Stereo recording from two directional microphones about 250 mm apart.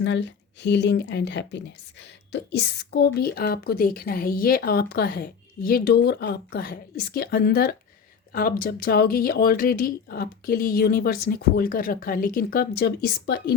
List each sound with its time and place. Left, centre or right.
0.0 s speech: left